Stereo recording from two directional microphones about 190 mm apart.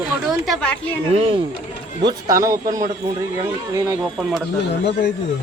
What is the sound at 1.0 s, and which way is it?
Speech, 30° right (ahead or behind).